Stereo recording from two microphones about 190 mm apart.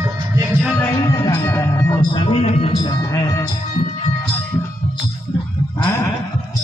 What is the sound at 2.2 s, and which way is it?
Music, 30° left (ahead or behind).